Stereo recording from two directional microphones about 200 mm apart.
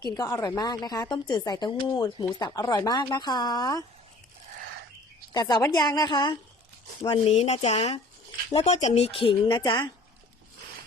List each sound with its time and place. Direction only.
0.1 s speech: 20° left (ahead or behind)
5.3 s speech: 20° left (ahead or behind)